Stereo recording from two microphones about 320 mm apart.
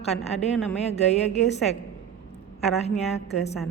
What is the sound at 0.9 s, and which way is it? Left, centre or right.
Speech, centre.